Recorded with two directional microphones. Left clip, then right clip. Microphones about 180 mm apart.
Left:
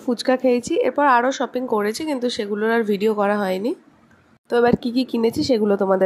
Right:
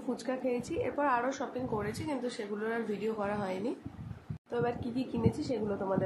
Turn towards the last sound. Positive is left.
turn(degrees=50)  # may be behind; listen again after turning